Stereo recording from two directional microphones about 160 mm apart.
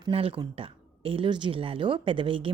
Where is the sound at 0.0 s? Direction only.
35° right (ahead or behind).